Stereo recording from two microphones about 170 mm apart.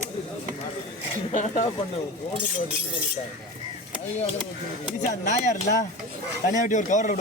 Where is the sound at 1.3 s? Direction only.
45° left (ahead or behind).